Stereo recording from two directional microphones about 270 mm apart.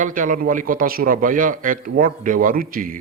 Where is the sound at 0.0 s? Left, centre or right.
Right.